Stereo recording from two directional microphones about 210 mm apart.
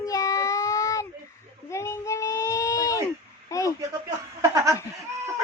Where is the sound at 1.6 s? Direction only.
15° left (ahead or behind).